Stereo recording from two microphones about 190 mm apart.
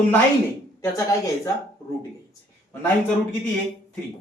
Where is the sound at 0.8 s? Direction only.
15° left (ahead or behind).